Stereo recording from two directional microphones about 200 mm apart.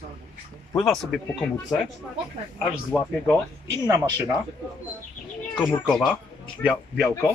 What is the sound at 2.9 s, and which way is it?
Speech, 5° right (ahead or behind).